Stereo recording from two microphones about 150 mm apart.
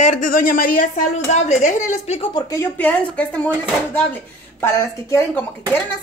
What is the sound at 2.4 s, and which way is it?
Speech, 15° left (ahead or behind).